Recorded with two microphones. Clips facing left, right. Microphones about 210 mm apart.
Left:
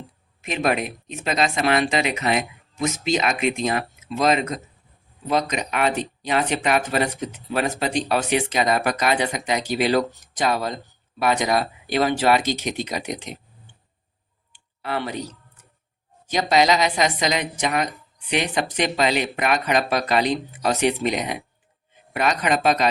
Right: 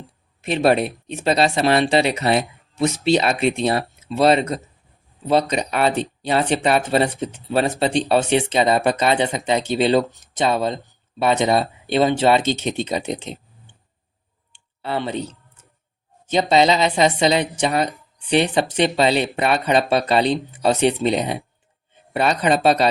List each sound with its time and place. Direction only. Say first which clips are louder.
0.4 s a woman's voice: right 6 dB; 35° right (ahead or behind)
14.5 s a sound: right 2 dB; 25° right (ahead or behind)
16.2 s a woman's voice: right 3 dB; 25° right (ahead or behind)